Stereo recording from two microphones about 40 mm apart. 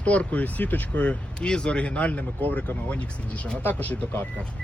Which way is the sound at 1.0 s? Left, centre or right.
Left.